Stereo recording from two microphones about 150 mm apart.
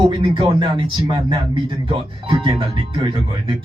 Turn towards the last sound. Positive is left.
turn(degrees=-35)  # may be behind; listen again after turning